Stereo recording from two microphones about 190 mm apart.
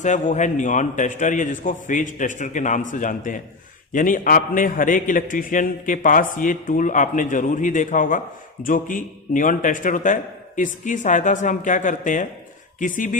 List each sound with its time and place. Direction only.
0.0 s a man's voice: 40° left (ahead or behind)